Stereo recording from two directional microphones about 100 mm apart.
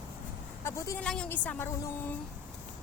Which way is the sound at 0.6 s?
30° left (ahead or behind).